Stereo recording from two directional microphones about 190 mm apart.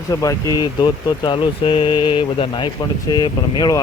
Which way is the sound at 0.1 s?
20° left (ahead or behind).